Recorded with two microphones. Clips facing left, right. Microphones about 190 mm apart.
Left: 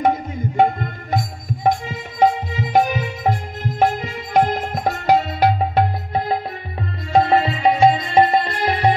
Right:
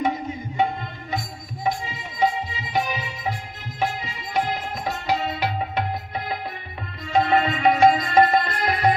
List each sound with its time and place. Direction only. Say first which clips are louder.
0.6 s music: left 7 dB; 50° left (ahead or behind); by 8.9 s 30° left (ahead or behind)